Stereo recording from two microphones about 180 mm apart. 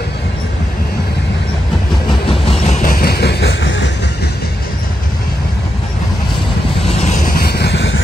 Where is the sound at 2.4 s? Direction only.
35° left (ahead or behind); by 4.2 s 75° left (ahead or behind).